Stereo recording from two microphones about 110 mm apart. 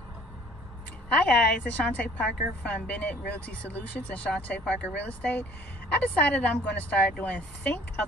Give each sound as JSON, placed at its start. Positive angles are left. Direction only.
{"t": 1.1, "sound": "a woman's voice", "side_deg": 10}